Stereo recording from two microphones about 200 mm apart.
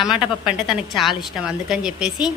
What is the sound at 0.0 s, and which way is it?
A woman's voice, centre (ahead or behind).